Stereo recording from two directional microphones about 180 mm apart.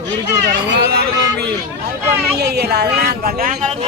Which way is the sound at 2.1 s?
65° right (ahead or behind).